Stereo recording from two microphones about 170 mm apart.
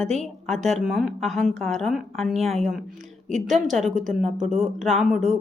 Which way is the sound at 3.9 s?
50° right (ahead or behind).